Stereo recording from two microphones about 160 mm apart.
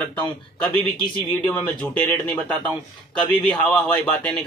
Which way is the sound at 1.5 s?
10° left (ahead or behind).